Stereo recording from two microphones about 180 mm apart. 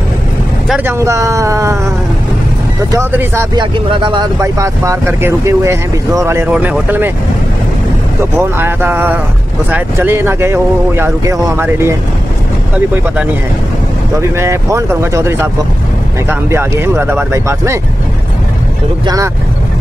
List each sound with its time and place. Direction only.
0.7 s speech: 10° right (ahead or behind)
2.9 s speech: 15° right (ahead or behind)
3.5 s speech: 25° right (ahead or behind); by 7.1 s 10° right (ahead or behind)
8.4 s speech: 10° right (ahead or behind)
14.1 s speech: 15° right (ahead or behind)
19.0 s speech: 20° right (ahead or behind)